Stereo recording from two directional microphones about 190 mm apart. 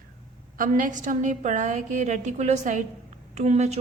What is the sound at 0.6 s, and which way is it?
A woman's voice, 45° right (ahead or behind).